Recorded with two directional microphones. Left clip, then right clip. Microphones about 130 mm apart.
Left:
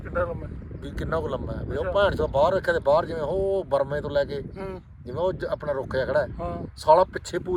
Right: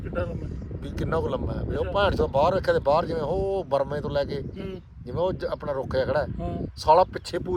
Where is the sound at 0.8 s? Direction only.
20° right (ahead or behind).